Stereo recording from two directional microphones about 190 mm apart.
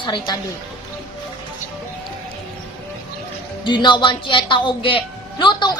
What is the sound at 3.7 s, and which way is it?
A woman's voice, 25° left (ahead or behind).